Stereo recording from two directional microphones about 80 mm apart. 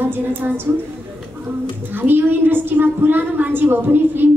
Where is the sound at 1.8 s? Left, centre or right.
Right.